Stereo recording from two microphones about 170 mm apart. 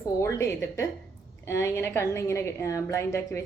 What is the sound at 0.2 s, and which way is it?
A woman's voice, 15° left (ahead or behind).